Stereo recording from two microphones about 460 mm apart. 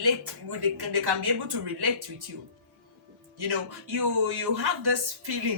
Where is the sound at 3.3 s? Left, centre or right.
Right.